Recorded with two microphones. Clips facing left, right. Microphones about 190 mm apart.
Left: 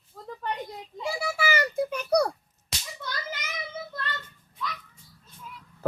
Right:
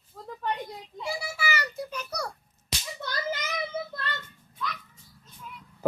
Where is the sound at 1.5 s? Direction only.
55° left (ahead or behind).